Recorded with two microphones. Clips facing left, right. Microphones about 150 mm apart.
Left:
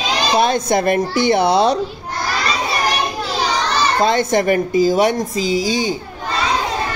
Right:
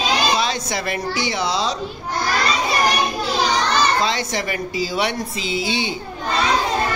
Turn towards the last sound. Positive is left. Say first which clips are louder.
# left 5 dB
turn(degrees=40)  # may be behind; listen again after turning